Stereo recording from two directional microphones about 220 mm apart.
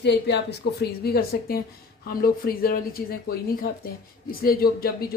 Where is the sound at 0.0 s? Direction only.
50° left (ahead or behind).